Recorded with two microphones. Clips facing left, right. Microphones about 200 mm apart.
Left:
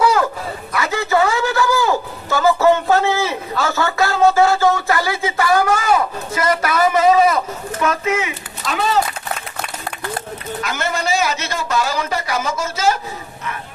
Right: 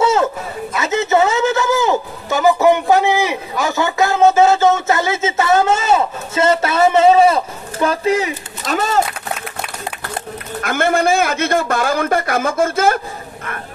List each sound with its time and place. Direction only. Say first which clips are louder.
0.0 s chatter: right 1 dB; 25° right (ahead or behind)
0.7 s a sound: right 2 dB; 20° right (ahead or behind); by 9.0 s 45° right (ahead or behind)
10.6 s a man's voice: right 8 dB; 55° right (ahead or behind)